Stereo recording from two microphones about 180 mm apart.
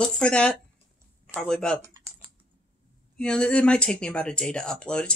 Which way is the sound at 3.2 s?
5° left (ahead or behind).